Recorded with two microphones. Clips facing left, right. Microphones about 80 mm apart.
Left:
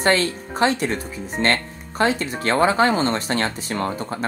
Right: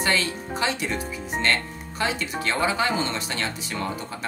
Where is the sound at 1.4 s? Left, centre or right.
Left.